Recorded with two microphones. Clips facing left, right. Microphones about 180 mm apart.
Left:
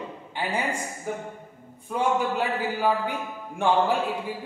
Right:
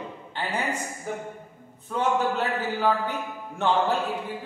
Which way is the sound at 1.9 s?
10° left (ahead or behind).